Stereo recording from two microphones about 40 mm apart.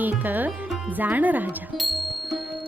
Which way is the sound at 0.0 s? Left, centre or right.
Right.